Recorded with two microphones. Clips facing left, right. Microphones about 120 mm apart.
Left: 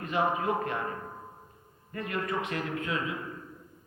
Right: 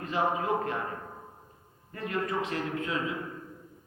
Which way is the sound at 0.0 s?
30° right (ahead or behind).